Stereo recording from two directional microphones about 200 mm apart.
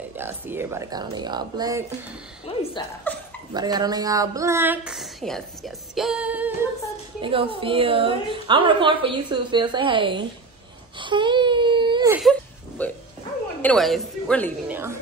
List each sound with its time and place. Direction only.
0.2 s speech: 10° right (ahead or behind)
2.5 s a woman's voice: 30° left (ahead or behind)
3.1 s speech: 10° left (ahead or behind)
3.5 s speech: 20° right (ahead or behind)
7.2 s a woman's voice: 25° right (ahead or behind)
11.0 s wail: 25° right (ahead or behind)
12.1 s a sound: centre (ahead or behind)
13.6 s a woman's voice: 5° left (ahead or behind)
14.7 s speech: 10° right (ahead or behind)